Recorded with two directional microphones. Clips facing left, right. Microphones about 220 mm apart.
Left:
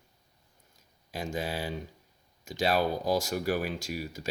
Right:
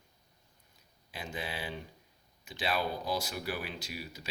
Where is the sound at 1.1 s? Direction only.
45° left (ahead or behind).